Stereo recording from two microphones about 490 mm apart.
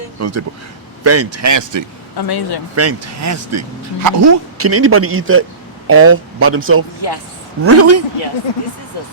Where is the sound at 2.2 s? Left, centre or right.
Left.